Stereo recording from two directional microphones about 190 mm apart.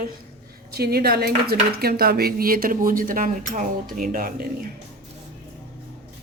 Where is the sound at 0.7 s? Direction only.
55° right (ahead or behind).